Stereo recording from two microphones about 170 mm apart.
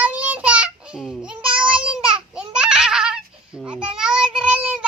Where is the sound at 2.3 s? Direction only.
5° right (ahead or behind).